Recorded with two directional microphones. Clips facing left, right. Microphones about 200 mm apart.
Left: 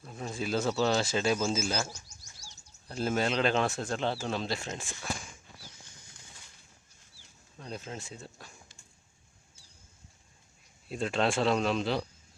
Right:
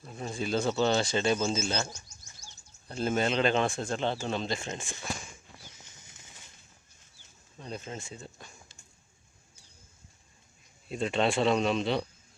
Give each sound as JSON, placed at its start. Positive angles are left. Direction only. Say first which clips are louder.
{"t": 0.0, "sound": "speech", "louder": "right 1 dB", "side_deg": 0}
{"t": 1.9, "sound": "bird", "louder": "even", "side_deg": 35}
{"t": 2.9, "sound": "speech", "louder": "right 1 dB", "side_deg": 0}
{"t": 7.6, "sound": "speech", "louder": "right 1 dB", "side_deg": 0}
{"t": 10.8, "sound": "speech", "louder": "right 1 dB", "side_deg": 0}